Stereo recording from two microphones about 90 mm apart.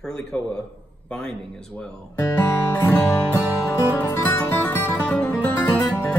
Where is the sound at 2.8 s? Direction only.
25° left (ahead or behind); by 5.4 s 10° left (ahead or behind).